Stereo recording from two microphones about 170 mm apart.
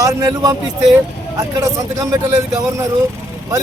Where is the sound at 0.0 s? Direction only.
20° right (ahead or behind).